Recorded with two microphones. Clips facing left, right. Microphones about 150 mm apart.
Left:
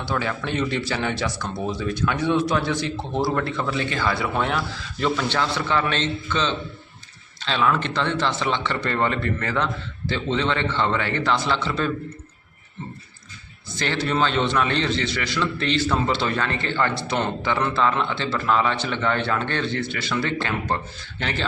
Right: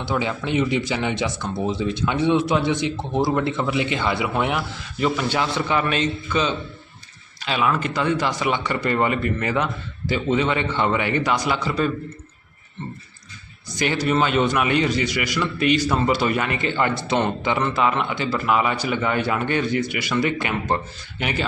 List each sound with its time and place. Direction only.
0.0 s a man's voice: 20° right (ahead or behind)
13.7 s a man's voice: 15° right (ahead or behind)